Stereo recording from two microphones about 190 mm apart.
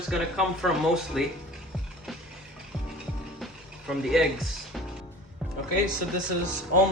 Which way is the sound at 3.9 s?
Centre (ahead or behind).